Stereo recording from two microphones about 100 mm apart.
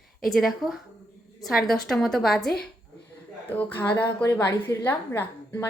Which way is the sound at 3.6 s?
15° left (ahead or behind).